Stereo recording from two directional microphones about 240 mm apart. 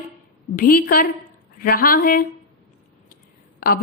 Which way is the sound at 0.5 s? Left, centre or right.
Left.